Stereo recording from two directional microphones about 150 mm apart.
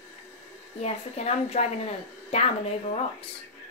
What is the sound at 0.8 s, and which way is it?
Speech, 45° left (ahead or behind).